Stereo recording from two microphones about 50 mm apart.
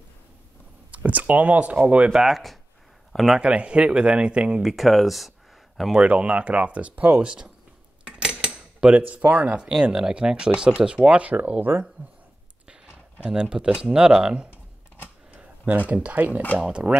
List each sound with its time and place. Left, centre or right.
0.9 s speech: right
2.1 s speech: centre
3.1 s a sound: centre
3.3 s speech: right
4.6 s speech: centre
5.9 s speech: right
8.0 s cutlery: centre
8.9 s speech: right
9.6 s speech: centre
11.7 s speech: right
12.6 s speech: centre
15.3 s tick-tock: right
15.9 s speech: right
16.8 s speech: centre